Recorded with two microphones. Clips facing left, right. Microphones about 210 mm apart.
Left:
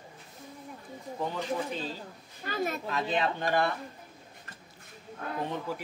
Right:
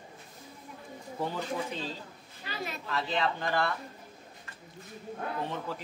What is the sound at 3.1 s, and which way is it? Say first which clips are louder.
Speech: left 2 dB; 20° left (ahead or behind).